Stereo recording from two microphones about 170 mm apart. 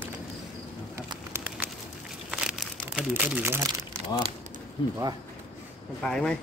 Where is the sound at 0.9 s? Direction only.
15° right (ahead or behind).